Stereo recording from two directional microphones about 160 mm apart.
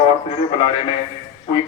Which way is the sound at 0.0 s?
35° left (ahead or behind).